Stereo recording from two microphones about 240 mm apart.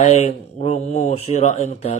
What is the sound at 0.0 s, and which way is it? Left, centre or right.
Speech, left.